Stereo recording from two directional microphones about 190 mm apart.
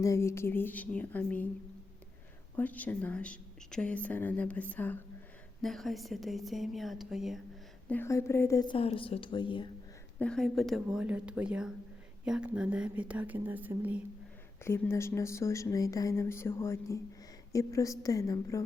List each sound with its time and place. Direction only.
0.0 s speech: 15° left (ahead or behind)
2.6 s a woman's voice: 10° left (ahead or behind)
7.9 s a woman's voice: 10° left (ahead or behind)
10.2 s a woman's voice: 5° left (ahead or behind)
14.6 s speech: 15° left (ahead or behind)